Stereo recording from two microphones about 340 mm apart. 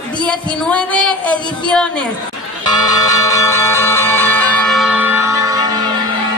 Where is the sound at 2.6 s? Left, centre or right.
Centre.